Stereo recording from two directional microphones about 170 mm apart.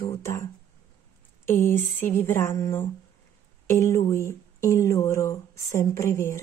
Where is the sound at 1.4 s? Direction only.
15° left (ahead or behind).